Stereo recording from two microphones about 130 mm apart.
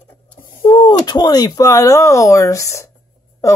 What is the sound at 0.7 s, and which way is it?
Speech, 35° left (ahead or behind).